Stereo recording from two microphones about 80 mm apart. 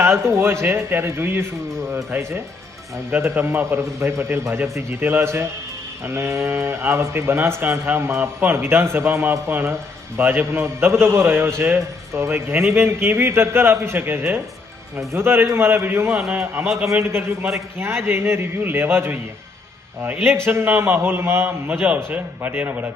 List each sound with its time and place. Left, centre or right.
0.0 s a man's voice: right
16.0 s a man's voice: centre
16.3 s a man's voice: right
20.2 s a man's voice: right